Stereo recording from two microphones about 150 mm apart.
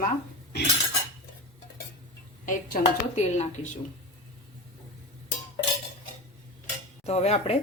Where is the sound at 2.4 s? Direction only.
55° left (ahead or behind).